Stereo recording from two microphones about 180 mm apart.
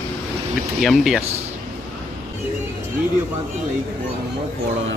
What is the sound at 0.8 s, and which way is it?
Speech, centre (ahead or behind).